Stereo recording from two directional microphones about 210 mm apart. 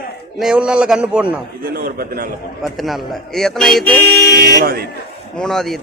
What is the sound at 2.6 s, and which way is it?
A man's voice, centre (ahead or behind).